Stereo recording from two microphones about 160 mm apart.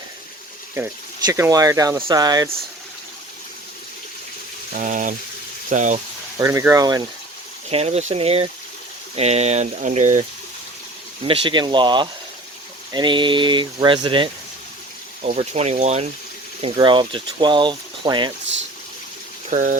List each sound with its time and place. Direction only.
0.7 s speech: 20° right (ahead or behind)
4.7 s speech: 55° right (ahead or behind)
6.4 s speech: 20° right (ahead or behind)
7.7 s speech: 40° right (ahead or behind)
11.3 s speech: 30° right (ahead or behind)
15.2 s speech: 40° right (ahead or behind)
19.5 s speech: 55° right (ahead or behind)